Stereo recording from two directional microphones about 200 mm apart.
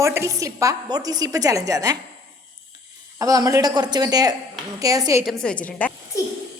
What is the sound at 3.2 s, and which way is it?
A woman's voice, 15° right (ahead or behind).